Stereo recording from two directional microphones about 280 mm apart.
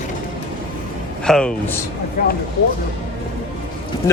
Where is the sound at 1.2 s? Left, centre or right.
Centre.